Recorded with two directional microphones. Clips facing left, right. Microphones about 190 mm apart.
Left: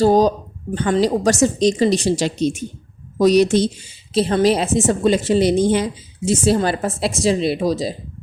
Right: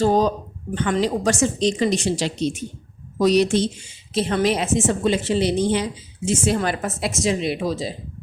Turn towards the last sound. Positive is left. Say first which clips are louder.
# left 5 dB
turn(degrees=40)  # may be behind; listen again after turning